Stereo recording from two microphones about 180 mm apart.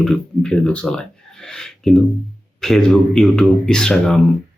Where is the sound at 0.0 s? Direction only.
5° left (ahead or behind).